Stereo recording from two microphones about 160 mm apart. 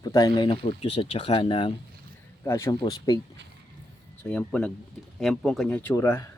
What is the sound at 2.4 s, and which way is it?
Speech, 20° left (ahead or behind).